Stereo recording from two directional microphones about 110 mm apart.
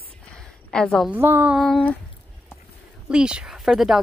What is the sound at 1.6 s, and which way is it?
Speech, 5° left (ahead or behind).